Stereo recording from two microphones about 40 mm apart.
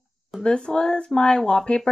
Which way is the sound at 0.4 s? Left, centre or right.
Left.